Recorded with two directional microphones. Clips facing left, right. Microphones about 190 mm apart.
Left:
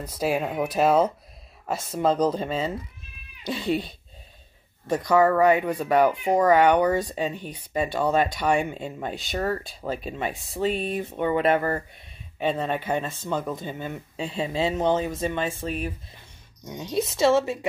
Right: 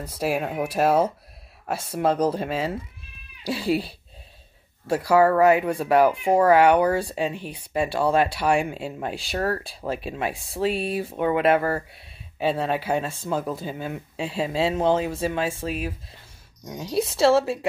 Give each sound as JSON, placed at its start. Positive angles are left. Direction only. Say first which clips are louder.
{"t": 0.0, "sound": "speech", "louder": "even", "side_deg": -5}
{"t": 4.8, "sound": "speech", "louder": "right 1 dB", "side_deg": -10}
{"t": 17.0, "sound": "a woman's voice", "louder": "right 2 dB", "side_deg": -30}